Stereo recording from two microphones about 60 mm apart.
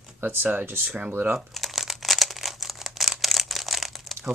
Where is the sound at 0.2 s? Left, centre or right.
Right.